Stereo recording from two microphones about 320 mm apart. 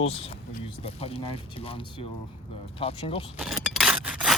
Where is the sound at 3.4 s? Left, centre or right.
Centre.